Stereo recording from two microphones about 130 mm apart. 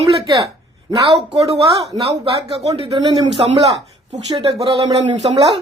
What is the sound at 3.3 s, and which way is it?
Speech, 55° right (ahead or behind).